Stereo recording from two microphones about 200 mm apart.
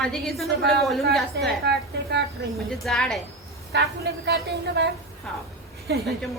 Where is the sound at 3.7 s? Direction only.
60° right (ahead or behind).